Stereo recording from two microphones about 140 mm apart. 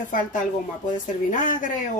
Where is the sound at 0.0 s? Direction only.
65° left (ahead or behind).